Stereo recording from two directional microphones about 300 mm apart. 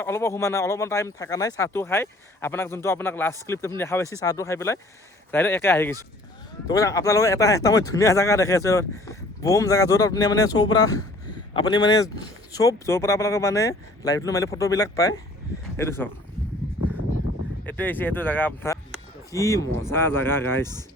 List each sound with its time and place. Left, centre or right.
0.0 s speech: centre
17.7 s speech: centre